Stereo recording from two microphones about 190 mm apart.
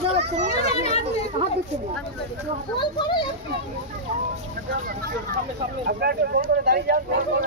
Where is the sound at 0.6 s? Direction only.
35° left (ahead or behind).